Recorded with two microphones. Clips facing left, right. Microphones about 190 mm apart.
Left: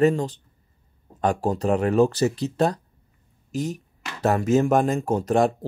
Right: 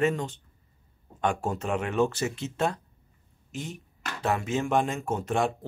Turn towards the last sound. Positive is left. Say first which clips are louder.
# left 7 dB
turn(degrees=40)  # may be behind; listen again after turning